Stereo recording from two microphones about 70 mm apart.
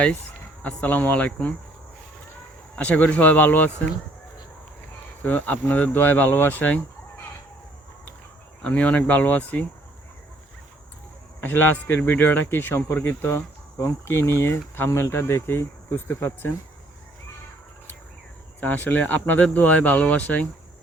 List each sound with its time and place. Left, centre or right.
0.6 s speech: left
2.7 s speech: left
5.2 s speech: left
8.6 s speech: centre
11.4 s speech: left
18.6 s speech: left